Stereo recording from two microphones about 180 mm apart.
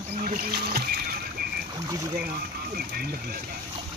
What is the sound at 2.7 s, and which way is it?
Speech, 60° right (ahead or behind).